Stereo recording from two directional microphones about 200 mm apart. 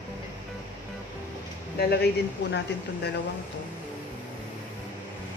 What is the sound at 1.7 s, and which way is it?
Speech, 55° left (ahead or behind).